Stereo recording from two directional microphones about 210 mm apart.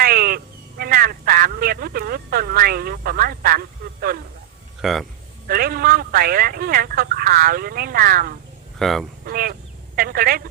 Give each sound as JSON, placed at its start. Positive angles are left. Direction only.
{"t": 0.0, "sound": "speech", "side_deg": -45}
{"t": 4.8, "sound": "speech", "side_deg": 0}
{"t": 5.5, "sound": "speech", "side_deg": -45}
{"t": 8.8, "sound": "speech", "side_deg": 0}
{"t": 9.2, "sound": "speech", "side_deg": -45}